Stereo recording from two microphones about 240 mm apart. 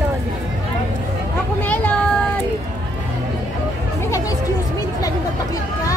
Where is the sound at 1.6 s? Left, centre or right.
Centre.